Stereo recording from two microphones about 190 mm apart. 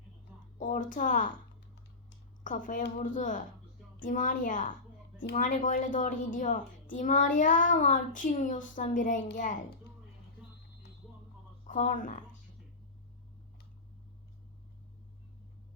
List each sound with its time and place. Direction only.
0.6 s a woman's voice: 40° left (ahead or behind)
2.4 s a woman's voice: 45° left (ahead or behind)
11.6 s speech: 45° left (ahead or behind)